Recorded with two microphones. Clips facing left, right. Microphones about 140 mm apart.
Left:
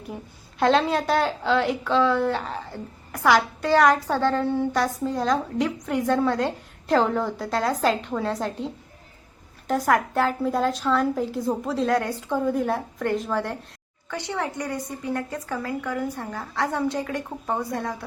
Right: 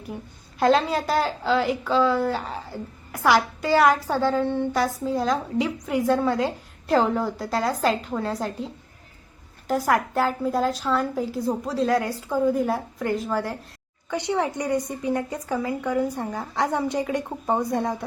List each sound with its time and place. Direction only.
0.6 s a woman's voice: centre (ahead or behind)
14.1 s a woman's voice: 15° right (ahead or behind)